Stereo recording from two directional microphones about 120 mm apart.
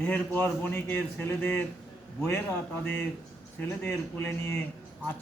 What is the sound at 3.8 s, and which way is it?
Speech, 15° left (ahead or behind).